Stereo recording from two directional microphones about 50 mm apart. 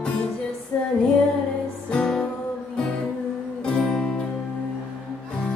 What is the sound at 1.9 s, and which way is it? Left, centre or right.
Music, centre.